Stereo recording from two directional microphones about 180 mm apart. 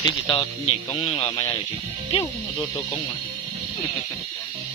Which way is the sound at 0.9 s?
25° left (ahead or behind).